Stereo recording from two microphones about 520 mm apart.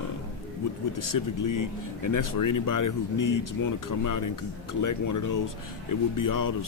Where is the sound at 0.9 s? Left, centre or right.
Left.